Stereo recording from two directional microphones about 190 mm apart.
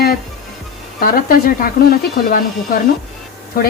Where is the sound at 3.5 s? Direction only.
50° left (ahead or behind).